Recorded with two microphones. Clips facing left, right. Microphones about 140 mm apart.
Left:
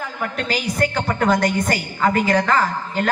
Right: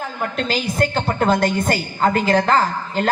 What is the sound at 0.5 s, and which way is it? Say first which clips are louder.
A woman's voice: even; 25° right (ahead or behind).